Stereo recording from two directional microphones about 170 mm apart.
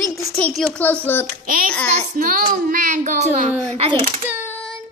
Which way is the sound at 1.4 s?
55° right (ahead or behind).